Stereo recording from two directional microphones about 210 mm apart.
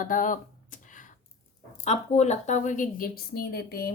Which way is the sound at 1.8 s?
30° left (ahead or behind).